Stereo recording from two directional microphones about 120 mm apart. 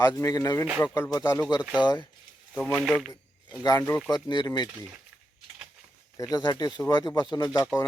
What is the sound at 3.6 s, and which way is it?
Speech, 25° left (ahead or behind).